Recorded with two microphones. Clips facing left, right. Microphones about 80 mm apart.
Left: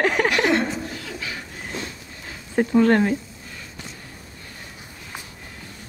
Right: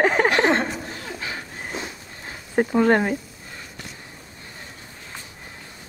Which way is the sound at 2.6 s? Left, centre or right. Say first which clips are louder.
Left 1 dB; centre.